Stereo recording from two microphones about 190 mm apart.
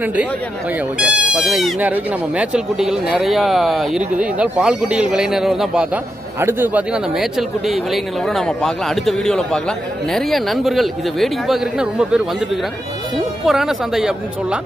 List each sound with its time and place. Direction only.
0.0 s speech: 5° right (ahead or behind)
13.5 s speech: centre (ahead or behind)